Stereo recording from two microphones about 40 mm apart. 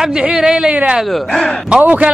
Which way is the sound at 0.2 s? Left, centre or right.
Right.